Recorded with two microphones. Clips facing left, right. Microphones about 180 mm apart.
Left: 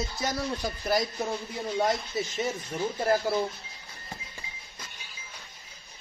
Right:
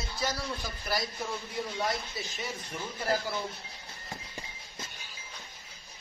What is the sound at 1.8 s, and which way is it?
Speech, 45° left (ahead or behind).